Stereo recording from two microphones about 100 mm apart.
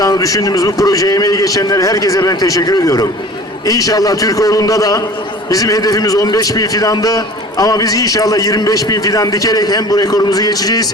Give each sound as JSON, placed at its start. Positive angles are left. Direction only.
{"t": 0.0, "sound": "a man's voice", "side_deg": 35}